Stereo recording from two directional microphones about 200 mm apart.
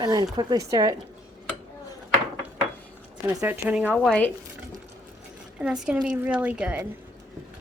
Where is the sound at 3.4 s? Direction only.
10° right (ahead or behind).